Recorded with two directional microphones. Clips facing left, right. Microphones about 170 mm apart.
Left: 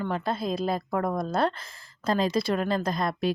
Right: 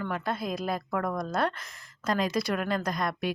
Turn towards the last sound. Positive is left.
turn(degrees=30)  # may be behind; listen again after turning